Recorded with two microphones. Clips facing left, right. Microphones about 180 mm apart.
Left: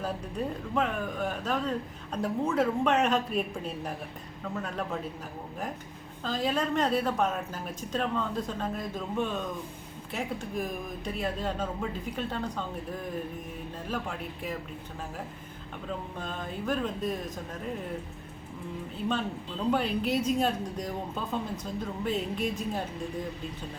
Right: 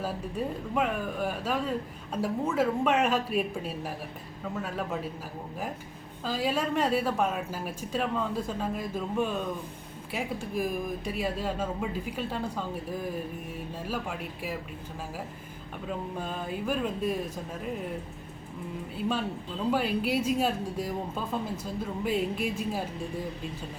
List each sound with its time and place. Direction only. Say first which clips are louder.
0.7 s speech: right 1 dB; 10° right (ahead or behind)
6.2 s speech: even; 10° right (ahead or behind)
16.1 s speech: right 3 dB; 10° right (ahead or behind)
19.7 s speech: right 1 dB; 5° right (ahead or behind)